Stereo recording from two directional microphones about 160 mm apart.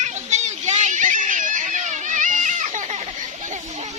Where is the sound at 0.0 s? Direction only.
45° right (ahead or behind).